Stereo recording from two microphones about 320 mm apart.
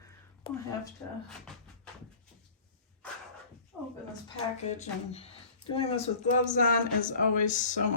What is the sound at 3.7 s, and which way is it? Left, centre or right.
Speech, centre.